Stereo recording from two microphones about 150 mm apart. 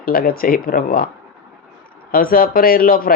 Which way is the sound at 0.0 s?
75° left (ahead or behind).